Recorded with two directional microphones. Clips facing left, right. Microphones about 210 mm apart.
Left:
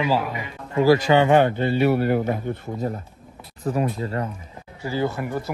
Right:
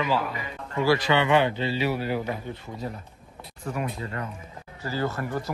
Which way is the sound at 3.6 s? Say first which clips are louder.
Left 7 dB; 35° left (ahead or behind).